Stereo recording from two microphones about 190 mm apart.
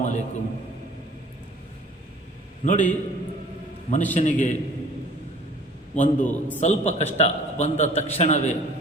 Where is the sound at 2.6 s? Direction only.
40° left (ahead or behind).